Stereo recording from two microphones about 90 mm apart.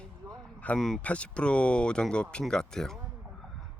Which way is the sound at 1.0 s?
15° left (ahead or behind).